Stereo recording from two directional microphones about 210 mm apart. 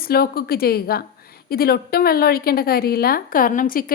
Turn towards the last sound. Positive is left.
turn(degrees=40)  # may be behind; listen again after turning